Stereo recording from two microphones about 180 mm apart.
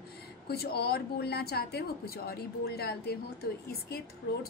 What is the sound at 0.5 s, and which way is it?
Speech, 60° left (ahead or behind).